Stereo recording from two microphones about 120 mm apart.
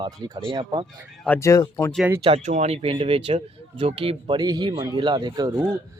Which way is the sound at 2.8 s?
50° right (ahead or behind).